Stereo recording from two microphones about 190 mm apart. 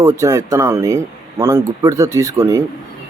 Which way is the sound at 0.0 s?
15° right (ahead or behind).